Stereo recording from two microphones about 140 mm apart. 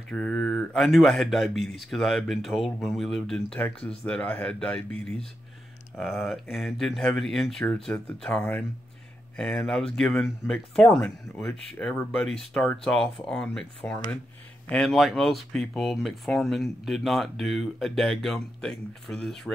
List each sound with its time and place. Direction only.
0.1 s speech: 5° left (ahead or behind)
14.7 s speech: centre (ahead or behind)